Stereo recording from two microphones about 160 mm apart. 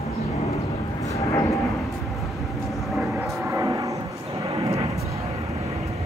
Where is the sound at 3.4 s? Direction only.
20° right (ahead or behind).